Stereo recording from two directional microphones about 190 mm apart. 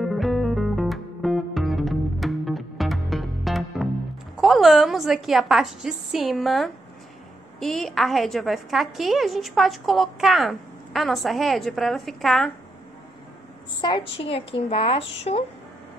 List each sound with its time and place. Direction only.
0.0 s music: centre (ahead or behind)
4.4 s a woman's voice: centre (ahead or behind)
13.7 s a woman's voice: 20° left (ahead or behind)